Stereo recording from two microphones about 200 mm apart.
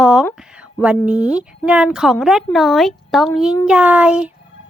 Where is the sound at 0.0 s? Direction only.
5° right (ahead or behind).